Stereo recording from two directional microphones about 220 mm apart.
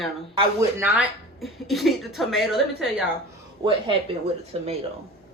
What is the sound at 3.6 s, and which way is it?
Speech, 20° right (ahead or behind).